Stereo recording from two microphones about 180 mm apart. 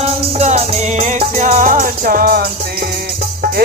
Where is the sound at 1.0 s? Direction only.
45° right (ahead or behind).